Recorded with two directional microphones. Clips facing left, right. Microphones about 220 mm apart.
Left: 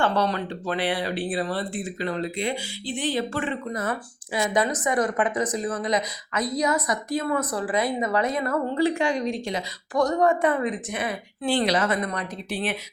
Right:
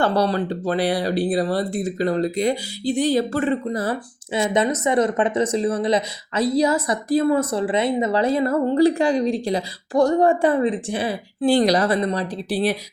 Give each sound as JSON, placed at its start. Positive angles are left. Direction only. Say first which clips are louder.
{"t": 0.0, "sound": "a woman's voice", "louder": "right 4 dB", "side_deg": -35}